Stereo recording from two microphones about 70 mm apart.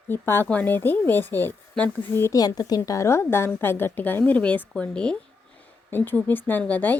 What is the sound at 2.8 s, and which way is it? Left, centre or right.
A woman's voice, left.